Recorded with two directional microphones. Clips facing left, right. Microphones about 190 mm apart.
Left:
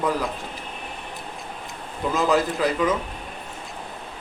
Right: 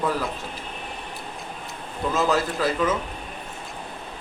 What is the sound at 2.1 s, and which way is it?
Speech, 15° left (ahead or behind).